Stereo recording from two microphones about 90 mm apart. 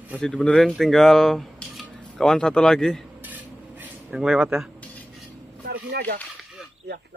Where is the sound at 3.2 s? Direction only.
20° right (ahead or behind).